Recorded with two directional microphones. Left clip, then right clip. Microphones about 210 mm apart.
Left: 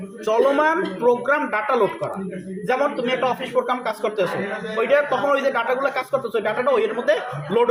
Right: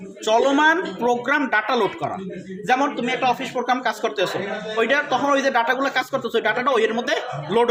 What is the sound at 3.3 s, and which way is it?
Speech, 45° right (ahead or behind).